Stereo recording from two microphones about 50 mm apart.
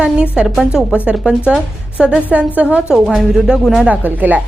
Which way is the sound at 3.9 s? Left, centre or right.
Right.